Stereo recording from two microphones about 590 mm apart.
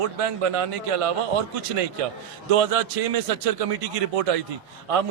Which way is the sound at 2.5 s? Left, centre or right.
Right.